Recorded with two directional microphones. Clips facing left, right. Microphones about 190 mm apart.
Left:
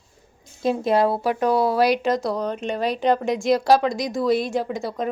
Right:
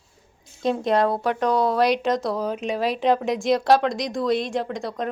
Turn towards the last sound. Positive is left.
turn(degrees=5)  # may be behind; listen again after turning